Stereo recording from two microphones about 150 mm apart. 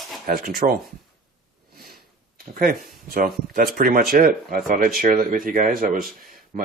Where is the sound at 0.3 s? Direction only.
75° right (ahead or behind).